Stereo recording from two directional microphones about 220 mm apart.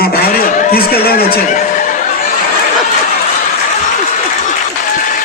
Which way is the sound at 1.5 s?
35° left (ahead or behind).